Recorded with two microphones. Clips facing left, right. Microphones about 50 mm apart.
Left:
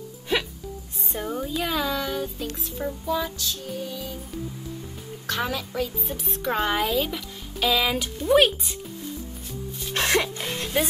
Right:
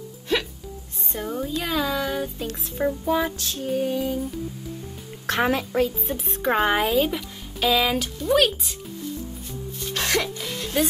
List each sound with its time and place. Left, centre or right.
0.3 s music: centre
1.1 s speech: centre
2.8 s female singing: right
5.2 s a woman's voice: right
6.4 s speech: right; by 8.7 s centre
9.9 s music: left
10.4 s music: left